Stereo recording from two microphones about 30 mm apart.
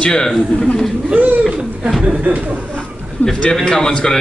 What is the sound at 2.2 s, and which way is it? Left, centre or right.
Speech, right.